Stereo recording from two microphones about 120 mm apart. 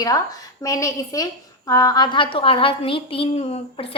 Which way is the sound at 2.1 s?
45° left (ahead or behind).